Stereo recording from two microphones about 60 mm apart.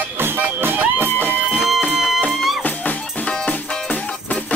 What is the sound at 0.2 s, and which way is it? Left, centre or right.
Music, right.